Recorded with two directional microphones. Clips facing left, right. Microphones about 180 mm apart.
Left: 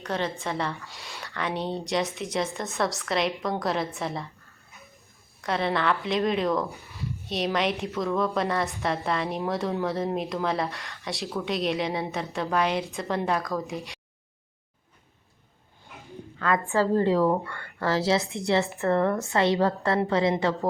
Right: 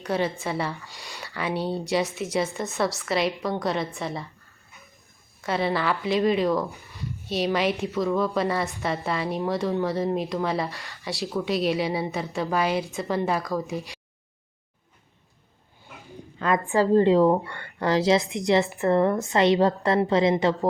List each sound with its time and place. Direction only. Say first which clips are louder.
0.0 s a woman's voice: right 3 dB; 10° right (ahead or behind)
5.4 s speech: right 1 dB; 5° right (ahead or behind)
16.4 s a woman's voice: right 2 dB; 20° right (ahead or behind)